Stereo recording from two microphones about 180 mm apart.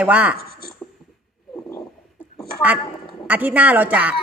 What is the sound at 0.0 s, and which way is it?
Speech, 5° right (ahead or behind).